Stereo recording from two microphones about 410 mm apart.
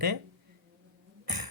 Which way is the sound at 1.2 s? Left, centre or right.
Right.